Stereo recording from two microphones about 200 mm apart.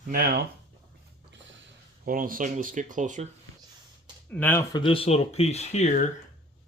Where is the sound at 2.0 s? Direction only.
45° right (ahead or behind).